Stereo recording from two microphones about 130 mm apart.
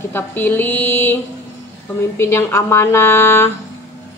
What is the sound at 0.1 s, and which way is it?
A woman's voice, 15° left (ahead or behind).